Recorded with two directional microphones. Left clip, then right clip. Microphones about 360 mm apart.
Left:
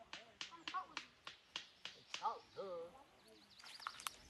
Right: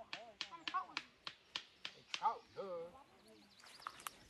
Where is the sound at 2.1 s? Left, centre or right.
Right.